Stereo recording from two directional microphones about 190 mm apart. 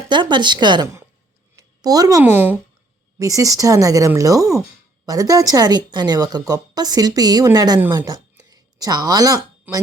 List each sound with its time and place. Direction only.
0.1 s a woman's voice: 25° right (ahead or behind)